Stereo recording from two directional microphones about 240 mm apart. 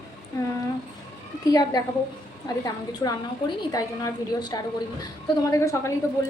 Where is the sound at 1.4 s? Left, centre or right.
Centre.